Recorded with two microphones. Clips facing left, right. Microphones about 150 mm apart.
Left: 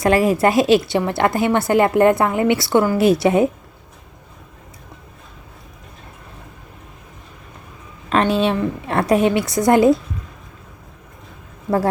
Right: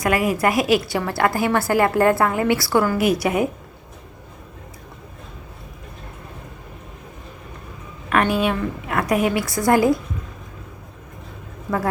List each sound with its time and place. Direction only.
0.0 s a woman's voice: 30° left (ahead or behind)
8.1 s a woman's voice: 25° left (ahead or behind)